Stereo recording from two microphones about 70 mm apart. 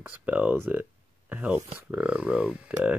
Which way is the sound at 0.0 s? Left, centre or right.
Centre.